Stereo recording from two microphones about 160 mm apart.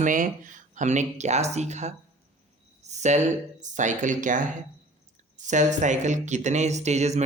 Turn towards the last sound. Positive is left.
turn(degrees=-45)  # may be behind; listen again after turning